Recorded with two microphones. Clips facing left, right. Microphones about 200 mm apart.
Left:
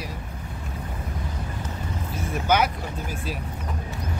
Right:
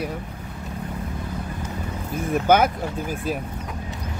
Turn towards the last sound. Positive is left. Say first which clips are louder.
# right 5 dB
turn(degrees=-50)  # may be behind; listen again after turning